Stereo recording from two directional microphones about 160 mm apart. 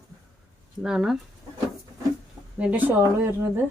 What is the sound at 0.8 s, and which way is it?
Speech, 5° right (ahead or behind).